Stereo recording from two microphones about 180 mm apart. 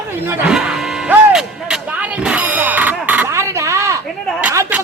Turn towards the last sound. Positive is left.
turn(degrees=-10)  # may be behind; listen again after turning